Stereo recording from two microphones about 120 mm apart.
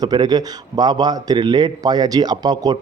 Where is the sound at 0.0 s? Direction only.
35° right (ahead or behind).